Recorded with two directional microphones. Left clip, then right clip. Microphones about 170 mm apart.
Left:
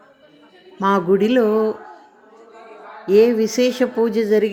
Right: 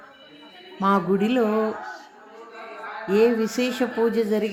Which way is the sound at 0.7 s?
10° left (ahead or behind).